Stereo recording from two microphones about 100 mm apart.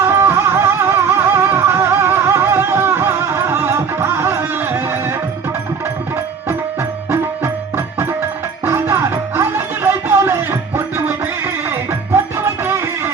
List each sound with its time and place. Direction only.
0.0 s music: 25° right (ahead or behind)
7.1 s music: 25° right (ahead or behind)